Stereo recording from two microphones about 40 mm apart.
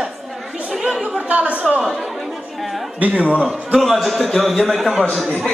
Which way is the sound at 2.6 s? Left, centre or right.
Centre.